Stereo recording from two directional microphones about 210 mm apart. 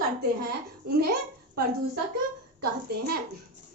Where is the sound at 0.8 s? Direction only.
50° right (ahead or behind).